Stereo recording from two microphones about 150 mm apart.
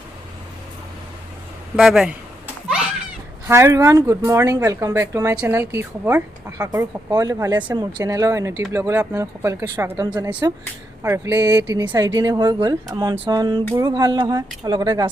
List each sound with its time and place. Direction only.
1.7 s speech: 5° right (ahead or behind)
3.4 s speech: 20° right (ahead or behind)